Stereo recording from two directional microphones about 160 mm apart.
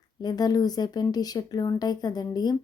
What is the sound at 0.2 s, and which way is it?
Speech, 25° left (ahead or behind).